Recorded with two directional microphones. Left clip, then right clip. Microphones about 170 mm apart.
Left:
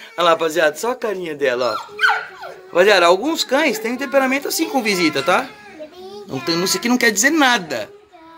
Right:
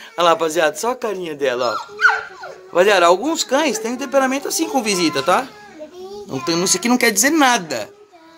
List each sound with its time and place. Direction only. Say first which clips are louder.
0.1 s speech: even; 10° right (ahead or behind)
1.8 s dog: right 1 dB; 55° left (ahead or behind)
2.7 s speech: even; 5° left (ahead or behind)